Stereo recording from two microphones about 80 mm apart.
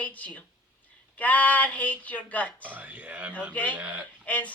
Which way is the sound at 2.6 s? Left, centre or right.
Right.